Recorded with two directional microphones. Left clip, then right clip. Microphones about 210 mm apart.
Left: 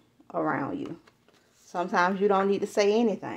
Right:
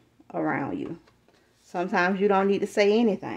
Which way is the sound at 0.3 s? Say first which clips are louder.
Right 1 dB; 25° right (ahead or behind).